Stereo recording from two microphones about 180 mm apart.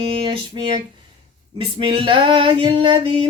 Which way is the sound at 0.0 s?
30° right (ahead or behind).